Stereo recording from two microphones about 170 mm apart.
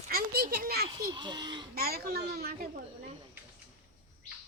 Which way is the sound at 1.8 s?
65° right (ahead or behind).